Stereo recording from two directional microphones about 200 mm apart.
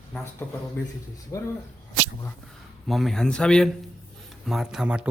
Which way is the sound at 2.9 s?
Centre (ahead or behind).